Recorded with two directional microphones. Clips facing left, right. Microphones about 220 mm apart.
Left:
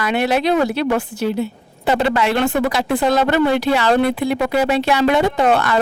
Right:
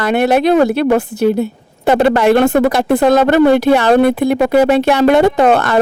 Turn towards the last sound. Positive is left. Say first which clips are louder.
# right 5 dB
turn(degrees=-50)  # may be behind; listen again after turning